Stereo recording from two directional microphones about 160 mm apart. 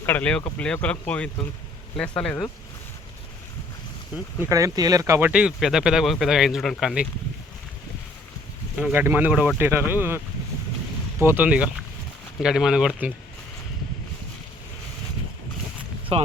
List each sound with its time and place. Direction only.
0.0 s speech: 10° left (ahead or behind)
4.4 s speech: 20° right (ahead or behind)
5.3 s speech: 5° right (ahead or behind)
8.7 s speech: 10° right (ahead or behind)
11.2 s speech: 15° right (ahead or behind)
16.1 s speech: 40° right (ahead or behind)